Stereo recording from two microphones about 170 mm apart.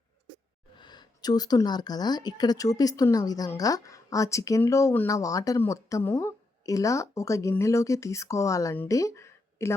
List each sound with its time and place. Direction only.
0.8 s a woman's voice: 25° left (ahead or behind)